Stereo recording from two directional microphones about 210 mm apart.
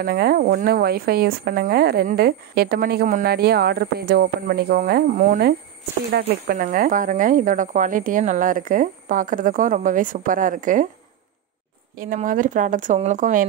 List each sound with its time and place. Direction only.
0.0 s speech: 50° right (ahead or behind)
12.0 s speech: 40° right (ahead or behind)